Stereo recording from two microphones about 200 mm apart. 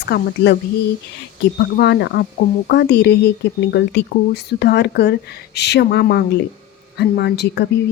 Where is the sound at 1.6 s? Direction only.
55° left (ahead or behind).